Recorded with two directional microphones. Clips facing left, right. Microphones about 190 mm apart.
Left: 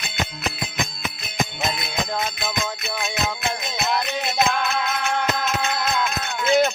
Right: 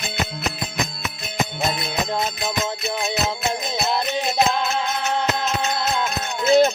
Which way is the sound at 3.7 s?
35° right (ahead or behind).